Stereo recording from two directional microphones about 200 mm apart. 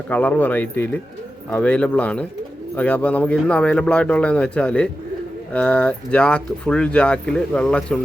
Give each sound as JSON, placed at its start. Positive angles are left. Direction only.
{"t": 0.1, "sound": "speech", "side_deg": 10}